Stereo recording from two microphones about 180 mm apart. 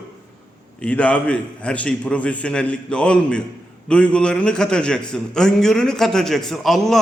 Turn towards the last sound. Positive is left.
turn(degrees=0)  # may be behind; listen again after turning